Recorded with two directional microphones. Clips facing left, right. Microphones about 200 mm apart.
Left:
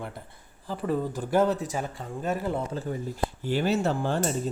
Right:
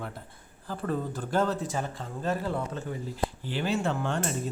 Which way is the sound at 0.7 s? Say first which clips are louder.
Left 3 dB; 15° left (ahead or behind).